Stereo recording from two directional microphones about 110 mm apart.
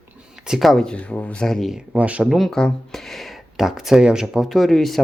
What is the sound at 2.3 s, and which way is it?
Speech, centre (ahead or behind).